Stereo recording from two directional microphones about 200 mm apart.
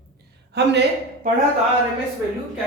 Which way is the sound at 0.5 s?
55° right (ahead or behind).